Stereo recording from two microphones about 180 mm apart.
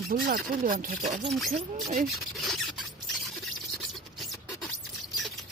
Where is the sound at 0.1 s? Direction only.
55° right (ahead or behind).